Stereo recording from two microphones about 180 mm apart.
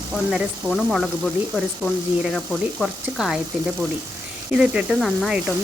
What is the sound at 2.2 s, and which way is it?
Speech, centre (ahead or behind).